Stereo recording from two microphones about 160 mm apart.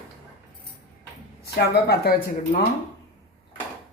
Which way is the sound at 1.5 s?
85° left.